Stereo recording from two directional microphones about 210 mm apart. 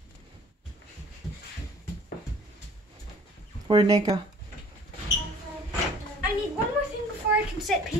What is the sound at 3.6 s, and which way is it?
Speech, 25° right (ahead or behind).